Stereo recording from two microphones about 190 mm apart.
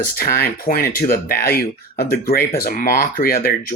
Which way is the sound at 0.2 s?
55° left (ahead or behind).